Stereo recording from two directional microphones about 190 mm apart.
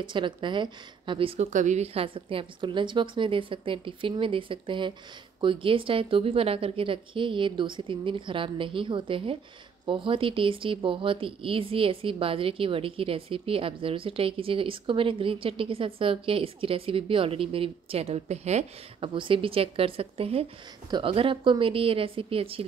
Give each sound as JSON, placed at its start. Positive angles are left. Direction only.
{"t": 0.0, "sound": "speech", "side_deg": -25}